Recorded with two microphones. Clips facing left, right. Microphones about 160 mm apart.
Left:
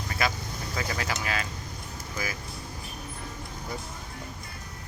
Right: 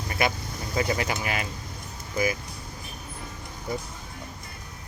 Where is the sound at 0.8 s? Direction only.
20° right (ahead or behind).